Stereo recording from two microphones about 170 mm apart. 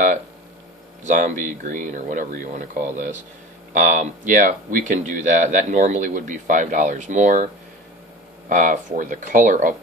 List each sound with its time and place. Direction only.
1.0 s speech: 50° right (ahead or behind)
8.5 s speech: 50° right (ahead or behind)